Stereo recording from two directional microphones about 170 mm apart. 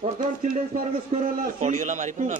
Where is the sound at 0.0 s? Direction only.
50° right (ahead or behind).